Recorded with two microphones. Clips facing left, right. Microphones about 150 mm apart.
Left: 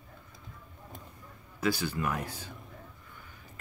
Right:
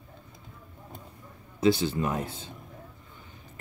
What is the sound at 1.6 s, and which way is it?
Speech, 25° right (ahead or behind).